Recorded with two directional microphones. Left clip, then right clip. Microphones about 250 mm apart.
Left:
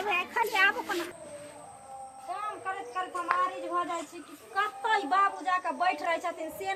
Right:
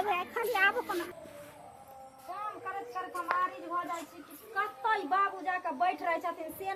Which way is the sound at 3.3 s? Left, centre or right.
Right.